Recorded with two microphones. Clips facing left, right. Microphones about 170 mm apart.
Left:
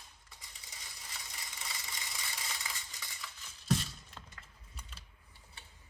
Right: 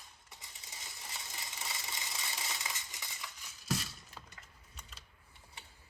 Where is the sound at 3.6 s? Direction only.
5° right (ahead or behind).